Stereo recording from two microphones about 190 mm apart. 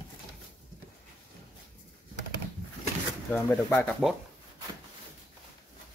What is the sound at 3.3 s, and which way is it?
Speech, 10° left (ahead or behind).